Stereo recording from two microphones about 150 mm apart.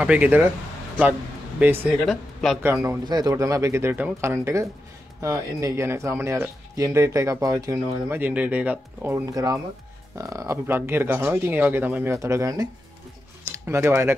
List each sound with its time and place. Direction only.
0.0 s speech: 10° right (ahead or behind)
1.6 s speech: 10° right (ahead or behind)
2.6 s speech: 15° right (ahead or behind)
13.7 s speech: 15° right (ahead or behind)